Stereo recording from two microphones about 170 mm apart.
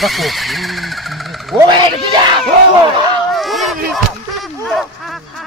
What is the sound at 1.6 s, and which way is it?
Speech, 25° right (ahead or behind).